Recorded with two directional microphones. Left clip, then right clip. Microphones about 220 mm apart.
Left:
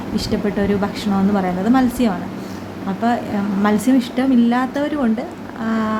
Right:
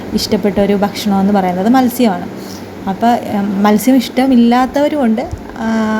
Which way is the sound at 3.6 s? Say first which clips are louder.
Right 6 dB; 15° right (ahead or behind).